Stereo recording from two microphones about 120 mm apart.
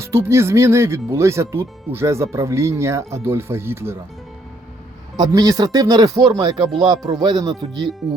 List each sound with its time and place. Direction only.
0.0 s speech: 20° right (ahead or behind)
5.1 s speech: 30° right (ahead or behind)